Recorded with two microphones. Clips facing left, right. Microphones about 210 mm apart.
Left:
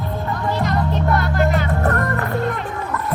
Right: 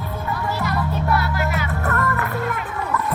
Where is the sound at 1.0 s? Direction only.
40° left (ahead or behind).